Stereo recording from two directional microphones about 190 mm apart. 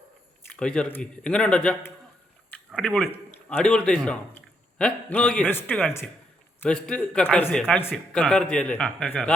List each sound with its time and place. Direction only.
0.5 s a man's voice: 5° left (ahead or behind)